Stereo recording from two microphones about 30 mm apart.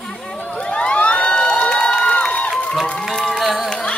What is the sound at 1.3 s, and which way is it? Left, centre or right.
Cheering, left.